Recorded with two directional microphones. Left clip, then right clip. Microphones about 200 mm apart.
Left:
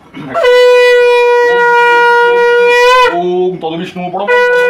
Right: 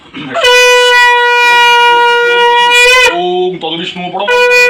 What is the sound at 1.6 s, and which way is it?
Shofar, 10° left (ahead or behind).